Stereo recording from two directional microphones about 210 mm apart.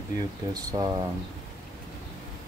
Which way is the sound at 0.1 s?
15° right (ahead or behind).